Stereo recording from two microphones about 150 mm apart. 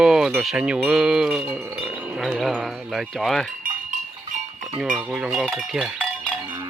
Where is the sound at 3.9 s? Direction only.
55° right (ahead or behind).